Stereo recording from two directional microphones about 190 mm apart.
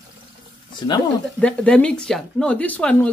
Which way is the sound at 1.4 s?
5° left (ahead or behind).